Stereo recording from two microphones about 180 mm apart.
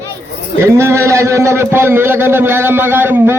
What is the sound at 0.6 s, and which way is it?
Speech, 15° right (ahead or behind).